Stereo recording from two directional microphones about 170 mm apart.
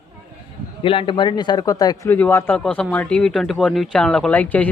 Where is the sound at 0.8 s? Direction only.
30° left (ahead or behind).